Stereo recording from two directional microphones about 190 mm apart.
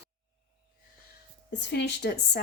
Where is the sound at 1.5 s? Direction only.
65° left (ahead or behind).